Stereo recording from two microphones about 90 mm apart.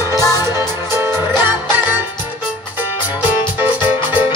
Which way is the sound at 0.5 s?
30° right (ahead or behind).